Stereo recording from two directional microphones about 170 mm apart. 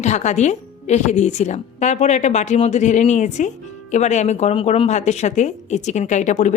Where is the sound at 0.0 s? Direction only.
45° left (ahead or behind).